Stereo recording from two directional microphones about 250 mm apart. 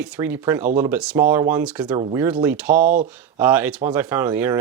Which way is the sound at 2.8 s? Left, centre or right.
Right.